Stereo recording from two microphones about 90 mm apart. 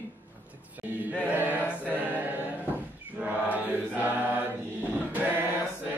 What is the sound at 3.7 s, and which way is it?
Mantra, 20° right (ahead or behind).